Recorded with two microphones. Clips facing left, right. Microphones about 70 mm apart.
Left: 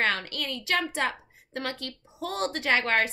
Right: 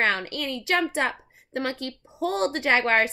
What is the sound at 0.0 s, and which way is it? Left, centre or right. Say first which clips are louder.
A child's voice: right 3 dB; right.